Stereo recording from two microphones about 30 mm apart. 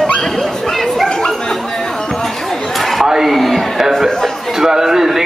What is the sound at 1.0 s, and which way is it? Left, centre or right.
Chatter, left.